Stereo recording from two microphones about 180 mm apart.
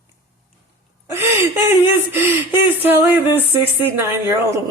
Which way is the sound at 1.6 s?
15° right (ahead or behind).